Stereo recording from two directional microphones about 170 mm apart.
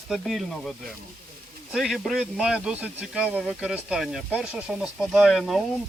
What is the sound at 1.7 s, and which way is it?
Speech, centre (ahead or behind).